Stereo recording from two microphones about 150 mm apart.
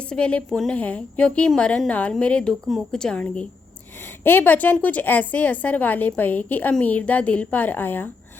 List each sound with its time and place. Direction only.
0.1 s a woman's voice: 10° left (ahead or behind)